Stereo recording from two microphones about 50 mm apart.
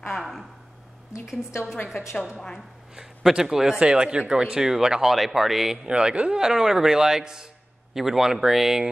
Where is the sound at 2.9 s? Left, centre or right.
Centre.